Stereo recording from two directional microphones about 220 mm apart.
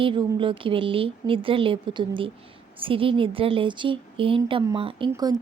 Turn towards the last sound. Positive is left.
turn(degrees=-15)  # may be behind; listen again after turning